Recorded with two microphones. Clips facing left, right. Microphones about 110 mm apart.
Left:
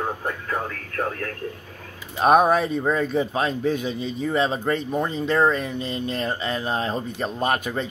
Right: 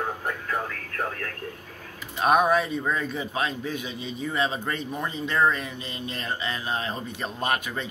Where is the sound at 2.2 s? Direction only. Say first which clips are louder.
Left 4 dB; 40° left (ahead or behind).